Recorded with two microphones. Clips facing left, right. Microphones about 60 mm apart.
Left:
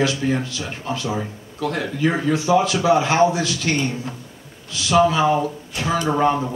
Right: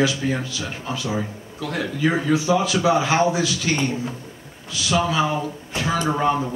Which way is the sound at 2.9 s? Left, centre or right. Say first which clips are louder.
Left 1 dB; centre.